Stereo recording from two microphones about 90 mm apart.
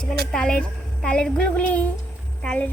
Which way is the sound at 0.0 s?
10° left (ahead or behind).